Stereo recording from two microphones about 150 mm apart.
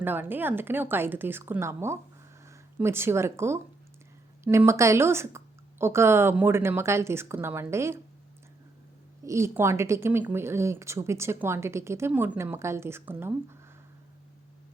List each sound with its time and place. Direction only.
0.0 s a woman's voice: 15° right (ahead or behind)
9.2 s a woman's voice: 20° right (ahead or behind)